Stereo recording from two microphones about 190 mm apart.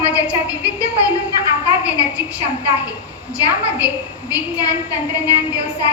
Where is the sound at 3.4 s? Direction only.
5° right (ahead or behind).